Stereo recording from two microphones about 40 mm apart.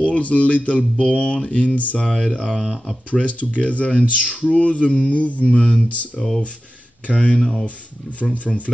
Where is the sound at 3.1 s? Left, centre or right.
Left.